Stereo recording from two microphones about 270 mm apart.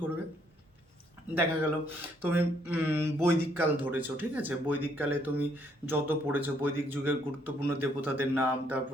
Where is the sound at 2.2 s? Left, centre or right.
Centre.